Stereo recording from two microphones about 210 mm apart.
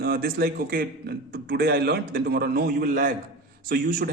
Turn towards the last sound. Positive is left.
turn(degrees=-45)  # may be behind; listen again after turning